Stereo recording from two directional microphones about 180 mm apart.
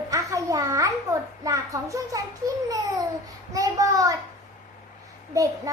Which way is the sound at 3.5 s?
20° right (ahead or behind).